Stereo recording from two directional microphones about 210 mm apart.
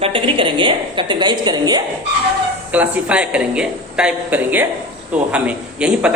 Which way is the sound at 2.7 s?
5° right (ahead or behind).